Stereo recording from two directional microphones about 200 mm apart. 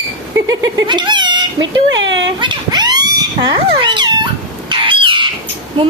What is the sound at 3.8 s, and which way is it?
Cat, 20° right (ahead or behind).